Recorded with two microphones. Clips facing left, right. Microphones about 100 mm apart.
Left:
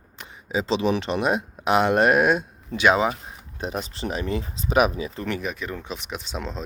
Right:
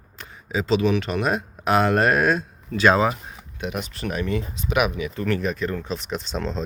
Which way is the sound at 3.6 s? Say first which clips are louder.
Even; 30° left (ahead or behind).